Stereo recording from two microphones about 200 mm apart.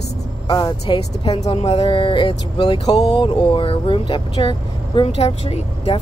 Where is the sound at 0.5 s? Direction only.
20° left (ahead or behind).